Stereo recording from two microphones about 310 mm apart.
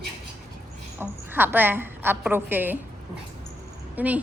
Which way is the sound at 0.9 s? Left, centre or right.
Centre.